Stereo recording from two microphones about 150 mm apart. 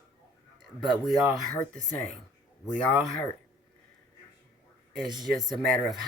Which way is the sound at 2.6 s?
5° left (ahead or behind).